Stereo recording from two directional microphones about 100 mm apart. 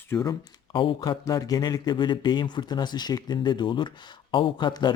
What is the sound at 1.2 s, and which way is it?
Speech, 35° left (ahead or behind).